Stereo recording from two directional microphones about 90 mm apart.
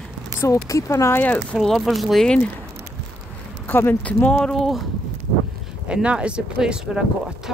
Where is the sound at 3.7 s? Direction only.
25° left (ahead or behind); by 4.8 s 5° left (ahead or behind).